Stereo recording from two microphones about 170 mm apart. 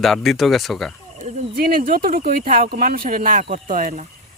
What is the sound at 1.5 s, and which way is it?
Speech, 60° right (ahead or behind).